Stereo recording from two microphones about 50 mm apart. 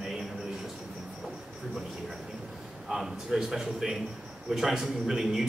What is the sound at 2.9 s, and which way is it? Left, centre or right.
Speech, centre.